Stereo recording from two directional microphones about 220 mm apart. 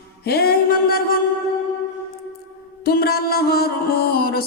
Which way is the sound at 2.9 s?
45° left (ahead or behind).